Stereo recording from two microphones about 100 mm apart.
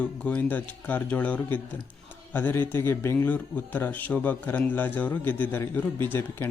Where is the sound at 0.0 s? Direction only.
15° left (ahead or behind).